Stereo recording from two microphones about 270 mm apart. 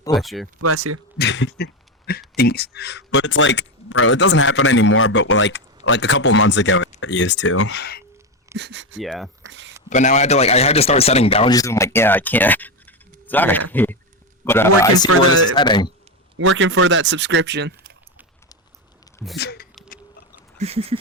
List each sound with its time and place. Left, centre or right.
0.1 s speech: centre
0.6 s speech: right
1.2 s a sound: left
2.3 s speech: left
8.5 s speech: right
9.0 s speech: centre
9.5 s speech: right
9.9 s a man's voice: left
16.4 s speech: right
19.4 s speech: left
20.6 s a sound: right